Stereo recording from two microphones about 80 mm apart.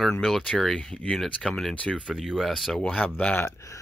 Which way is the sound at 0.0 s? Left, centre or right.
Centre.